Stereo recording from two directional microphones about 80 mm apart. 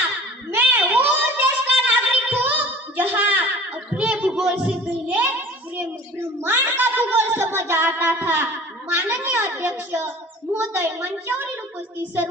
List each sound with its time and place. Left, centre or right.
0.5 s a sound: right
3.9 s child singing: centre
6.4 s music: right
9.0 s a child's voice: right